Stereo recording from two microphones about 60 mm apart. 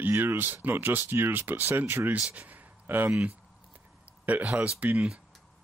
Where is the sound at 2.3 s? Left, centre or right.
Right.